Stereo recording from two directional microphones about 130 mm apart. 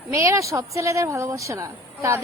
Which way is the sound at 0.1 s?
25° right (ahead or behind).